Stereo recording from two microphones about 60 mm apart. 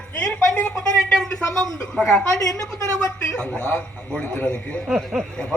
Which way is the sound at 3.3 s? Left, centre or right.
Centre.